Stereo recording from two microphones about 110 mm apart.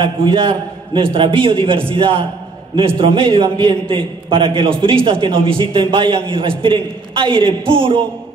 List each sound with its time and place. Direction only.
0.0 s a man's voice: 50° right (ahead or behind)